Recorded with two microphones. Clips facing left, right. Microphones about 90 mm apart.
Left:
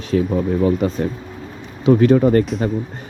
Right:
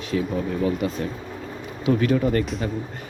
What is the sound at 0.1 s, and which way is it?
Speech, 40° left (ahead or behind).